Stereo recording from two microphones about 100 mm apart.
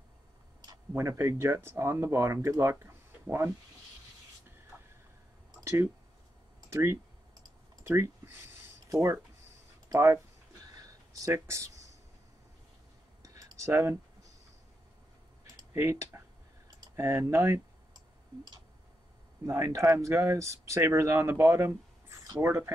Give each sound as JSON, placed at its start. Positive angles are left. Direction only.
{"t": 0.9, "sound": "speech", "side_deg": -25}
{"t": 5.6, "sound": "speech", "side_deg": -25}
{"t": 10.7, "sound": "a sound", "side_deg": -35}
{"t": 11.3, "sound": "speech", "side_deg": -30}
{"t": 13.2, "sound": "a sound", "side_deg": -35}
{"t": 13.7, "sound": "speech", "side_deg": -25}
{"t": 15.7, "sound": "speech", "side_deg": -25}
{"t": 19.4, "sound": "speech", "side_deg": -30}